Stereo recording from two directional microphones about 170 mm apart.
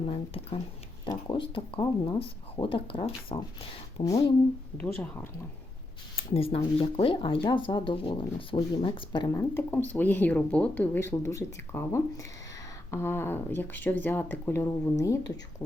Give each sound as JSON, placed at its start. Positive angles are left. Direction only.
{"t": 0.0, "sound": "speech", "side_deg": 35}
{"t": 4.0, "sound": "speech", "side_deg": 20}
{"t": 4.8, "sound": "speech", "side_deg": 10}
{"t": 6.3, "sound": "speech", "side_deg": 35}